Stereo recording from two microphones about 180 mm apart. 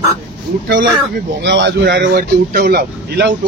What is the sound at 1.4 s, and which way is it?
Speech, 75° right (ahead or behind).